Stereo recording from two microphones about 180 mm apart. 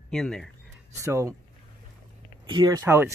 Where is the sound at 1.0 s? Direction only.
15° right (ahead or behind).